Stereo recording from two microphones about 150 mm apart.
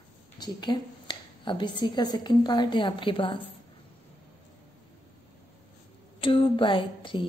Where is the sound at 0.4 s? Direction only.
30° left (ahead or behind).